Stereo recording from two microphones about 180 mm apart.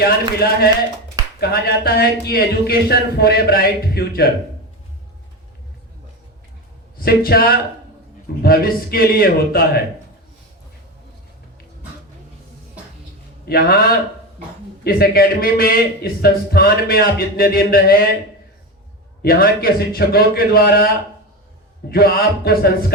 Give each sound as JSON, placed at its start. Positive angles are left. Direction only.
{"t": 0.0, "sound": "speech", "side_deg": 60}
{"t": 7.0, "sound": "speech", "side_deg": 55}
{"t": 13.4, "sound": "speech", "side_deg": 60}
{"t": 19.2, "sound": "speech", "side_deg": 55}